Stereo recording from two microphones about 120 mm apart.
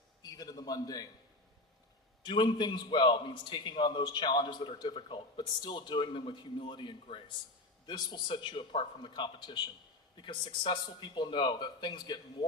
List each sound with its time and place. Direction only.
0.3 s a man's voice: 30° left (ahead or behind)
2.2 s a man's voice: 40° left (ahead or behind)